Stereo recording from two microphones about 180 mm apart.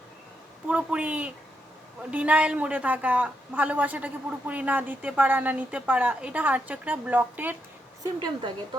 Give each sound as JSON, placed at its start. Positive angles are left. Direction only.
{"t": 0.7, "sound": "a woman's voice", "side_deg": -5}
{"t": 8.0, "sound": "a woman's voice", "side_deg": -25}